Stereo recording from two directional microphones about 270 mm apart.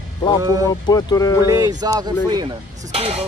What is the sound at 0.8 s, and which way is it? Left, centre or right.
Speech, centre.